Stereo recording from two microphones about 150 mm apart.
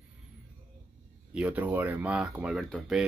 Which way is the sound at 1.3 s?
10° right (ahead or behind).